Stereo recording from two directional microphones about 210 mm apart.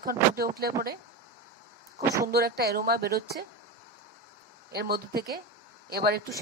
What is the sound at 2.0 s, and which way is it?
Speech, 15° right (ahead or behind).